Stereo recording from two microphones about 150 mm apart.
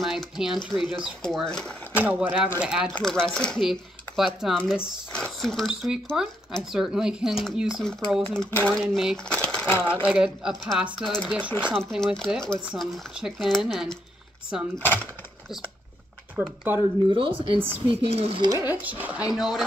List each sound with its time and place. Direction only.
0.0 s speech: centre (ahead or behind)
2.0 s speech: 10° right (ahead or behind)
2.9 s speech: 5° left (ahead or behind)
8.7 s speech: centre (ahead or behind)
9.3 s a sound: 10° left (ahead or behind)
10.0 s speech: 5° right (ahead or behind)
17.1 s speech: 35° right (ahead or behind)
18.7 s speech: 10° right (ahead or behind)